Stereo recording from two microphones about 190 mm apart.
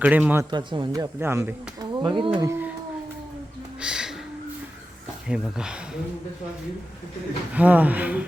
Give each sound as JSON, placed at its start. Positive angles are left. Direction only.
{"t": 0.0, "sound": "speech", "side_deg": -10}
{"t": 0.5, "sound": "speech", "side_deg": -25}
{"t": 1.2, "sound": "speech", "side_deg": -10}
{"t": 2.5, "sound": "speech", "side_deg": -10}
{"t": 3.8, "sound": "music", "side_deg": -5}
{"t": 5.3, "sound": "speech", "side_deg": -5}
{"t": 7.5, "sound": "speech", "side_deg": -10}